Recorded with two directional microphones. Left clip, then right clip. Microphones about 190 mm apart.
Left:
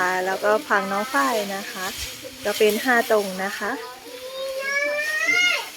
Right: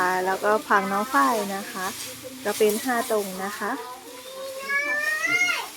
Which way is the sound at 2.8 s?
15° left (ahead or behind).